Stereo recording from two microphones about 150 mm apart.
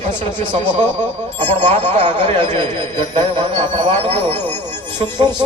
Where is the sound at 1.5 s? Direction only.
50° right (ahead or behind).